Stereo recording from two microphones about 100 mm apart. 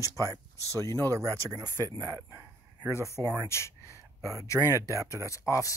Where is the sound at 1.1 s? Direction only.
35° right (ahead or behind).